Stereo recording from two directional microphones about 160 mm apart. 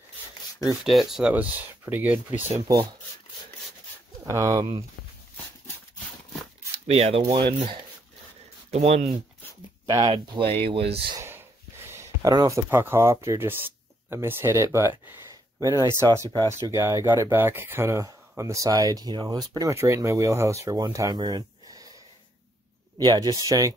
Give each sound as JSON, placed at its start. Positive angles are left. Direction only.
{"t": 0.8, "sound": "speech", "side_deg": 0}
{"t": 4.3, "sound": "speech", "side_deg": -20}
{"t": 6.9, "sound": "speech", "side_deg": -40}
{"t": 8.7, "sound": "speech", "side_deg": -40}
{"t": 9.8, "sound": "speech", "side_deg": -25}
{"t": 11.2, "sound": "speech", "side_deg": -15}
{"t": 22.9, "sound": "speech", "side_deg": -25}